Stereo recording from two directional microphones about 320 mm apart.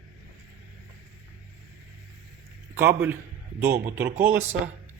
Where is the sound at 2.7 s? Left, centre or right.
Centre.